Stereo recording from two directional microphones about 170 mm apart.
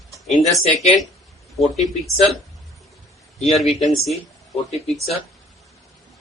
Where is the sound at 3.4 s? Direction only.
Centre (ahead or behind).